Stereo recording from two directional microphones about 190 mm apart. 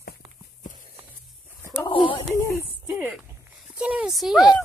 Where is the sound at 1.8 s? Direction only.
25° left (ahead or behind).